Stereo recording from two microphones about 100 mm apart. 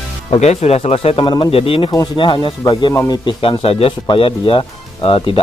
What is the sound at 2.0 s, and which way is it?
Speech, 55° left (ahead or behind).